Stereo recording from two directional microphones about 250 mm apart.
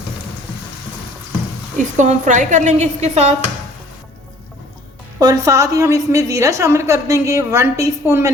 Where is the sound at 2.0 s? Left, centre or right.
Right.